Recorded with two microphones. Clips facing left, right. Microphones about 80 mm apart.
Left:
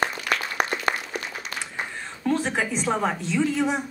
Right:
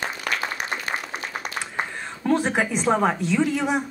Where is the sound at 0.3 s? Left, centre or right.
Right.